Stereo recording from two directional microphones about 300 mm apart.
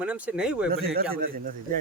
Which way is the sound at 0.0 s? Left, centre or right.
Centre.